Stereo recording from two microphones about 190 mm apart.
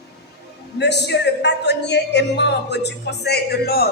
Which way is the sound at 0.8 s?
65° left (ahead or behind).